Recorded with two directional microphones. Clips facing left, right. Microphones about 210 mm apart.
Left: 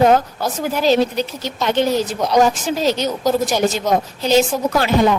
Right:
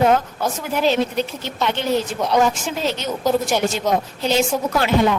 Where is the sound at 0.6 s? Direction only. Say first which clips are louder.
Left 4 dB; 35° left (ahead or behind).